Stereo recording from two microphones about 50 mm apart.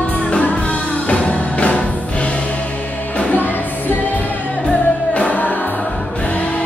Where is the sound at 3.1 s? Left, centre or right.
Left.